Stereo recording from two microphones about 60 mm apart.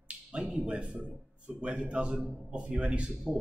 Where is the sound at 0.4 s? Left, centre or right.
Centre.